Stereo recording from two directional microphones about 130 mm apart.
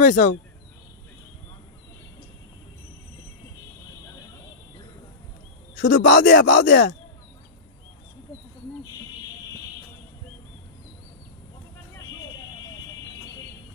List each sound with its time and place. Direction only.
0.0 s speech: 80° left
5.9 s speech: 90° left